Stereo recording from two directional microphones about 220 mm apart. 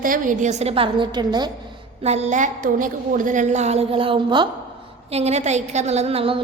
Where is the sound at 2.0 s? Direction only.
30° right (ahead or behind).